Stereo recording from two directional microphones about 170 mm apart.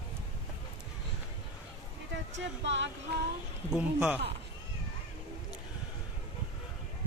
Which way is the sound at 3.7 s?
5° right (ahead or behind).